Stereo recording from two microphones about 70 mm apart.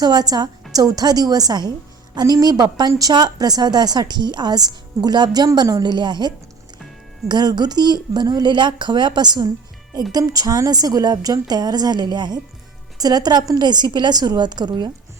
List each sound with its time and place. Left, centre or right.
0.0 s a woman's voice: right
0.7 s a woman's voice: right
10.1 s a woman's voice: right
13.0 s a woman's voice: right
13.5 s speech: right